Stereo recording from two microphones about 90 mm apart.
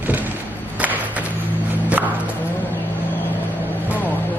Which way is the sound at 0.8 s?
15° right (ahead or behind).